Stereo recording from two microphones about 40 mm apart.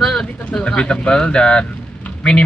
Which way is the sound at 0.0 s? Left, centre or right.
Centre.